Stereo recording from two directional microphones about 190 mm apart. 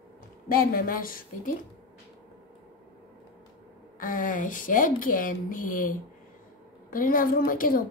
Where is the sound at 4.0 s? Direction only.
45° left (ahead or behind).